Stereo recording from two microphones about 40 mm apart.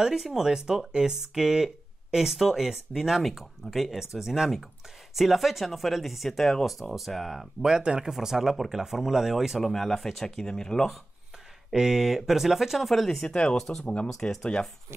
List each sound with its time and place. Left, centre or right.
0.0 s speech: centre
7.6 s speech: right
8.1 s speech: centre
9.6 s speech: centre
11.7 s speech: centre
13.1 s speech: centre
13.6 s speech: centre